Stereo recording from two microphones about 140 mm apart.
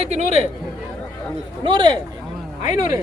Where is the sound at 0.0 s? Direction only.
50° right (ahead or behind).